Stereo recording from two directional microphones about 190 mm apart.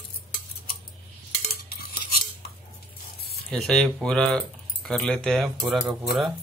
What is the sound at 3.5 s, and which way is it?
Speech, 5° left (ahead or behind).